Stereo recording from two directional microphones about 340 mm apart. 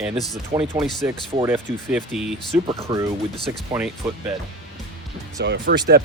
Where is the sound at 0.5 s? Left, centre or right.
Centre.